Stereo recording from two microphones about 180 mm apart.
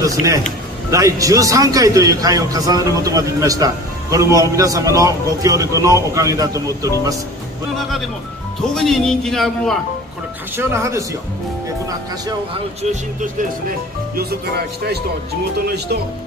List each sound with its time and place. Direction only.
0.0 s a man's voice: 20° right (ahead or behind)
8.7 s a man's voice: centre (ahead or behind)
10.5 s speech: 15° right (ahead or behind)
13.2 s speech: 50° right (ahead or behind)